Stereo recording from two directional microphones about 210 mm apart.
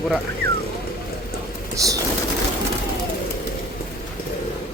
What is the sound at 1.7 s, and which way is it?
Speech, 15° right (ahead or behind).